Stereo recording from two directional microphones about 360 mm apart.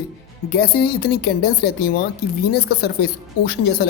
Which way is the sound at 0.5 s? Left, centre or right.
Left.